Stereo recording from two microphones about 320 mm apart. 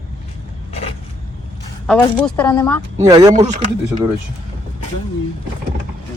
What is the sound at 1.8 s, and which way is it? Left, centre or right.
A woman's voice, centre.